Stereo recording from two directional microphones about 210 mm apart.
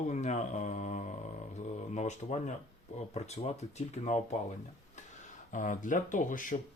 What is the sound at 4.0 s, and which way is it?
Speech, 35° left (ahead or behind).